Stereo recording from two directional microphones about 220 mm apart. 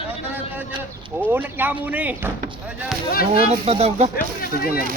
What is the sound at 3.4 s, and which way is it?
Speech, 25° right (ahead or behind).